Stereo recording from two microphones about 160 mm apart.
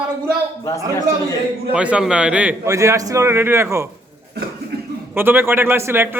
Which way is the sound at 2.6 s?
20° right (ahead or behind).